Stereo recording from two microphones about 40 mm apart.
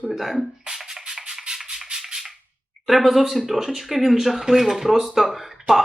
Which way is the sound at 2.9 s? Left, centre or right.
Centre.